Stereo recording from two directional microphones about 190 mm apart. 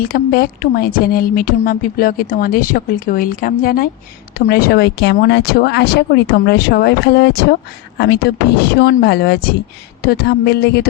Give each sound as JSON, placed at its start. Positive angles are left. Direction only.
{"t": 0.1, "sound": "speech", "side_deg": 50}